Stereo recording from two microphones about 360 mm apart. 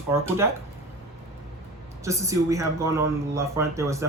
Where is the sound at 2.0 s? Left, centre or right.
Centre.